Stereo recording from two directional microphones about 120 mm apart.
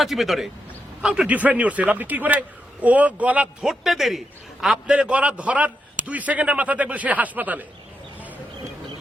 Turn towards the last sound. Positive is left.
turn(degrees=-15)  # may be behind; listen again after turning